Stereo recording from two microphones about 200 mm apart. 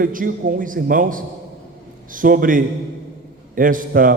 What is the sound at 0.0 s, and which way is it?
A man's voice, 45° right (ahead or behind).